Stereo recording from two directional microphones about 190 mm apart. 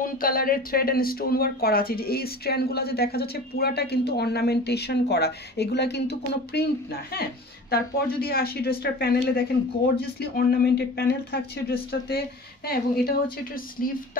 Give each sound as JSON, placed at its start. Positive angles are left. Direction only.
{"t": 0.0, "sound": "speech", "side_deg": 50}
{"t": 13.8, "sound": "speech", "side_deg": 50}